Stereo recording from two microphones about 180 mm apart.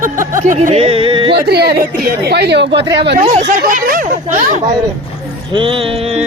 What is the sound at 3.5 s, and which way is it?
Speech, 50° right (ahead or behind).